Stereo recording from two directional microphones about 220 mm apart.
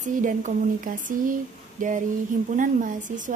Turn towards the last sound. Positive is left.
turn(degrees=-35)  # may be behind; listen again after turning